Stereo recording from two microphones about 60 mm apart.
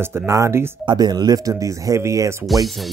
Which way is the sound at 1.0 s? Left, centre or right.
Right.